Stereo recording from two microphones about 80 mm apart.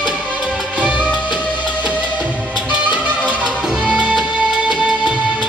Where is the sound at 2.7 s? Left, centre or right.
Centre.